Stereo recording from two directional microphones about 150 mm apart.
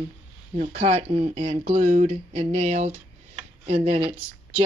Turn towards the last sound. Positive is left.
turn(degrees=-40)  # may be behind; listen again after turning